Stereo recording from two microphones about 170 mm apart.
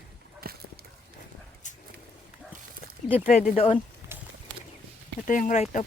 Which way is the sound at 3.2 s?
45° left (ahead or behind).